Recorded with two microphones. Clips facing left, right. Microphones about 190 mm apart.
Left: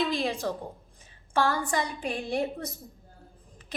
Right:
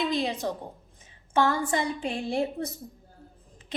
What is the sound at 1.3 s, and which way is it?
A woman's voice, 20° right (ahead or behind).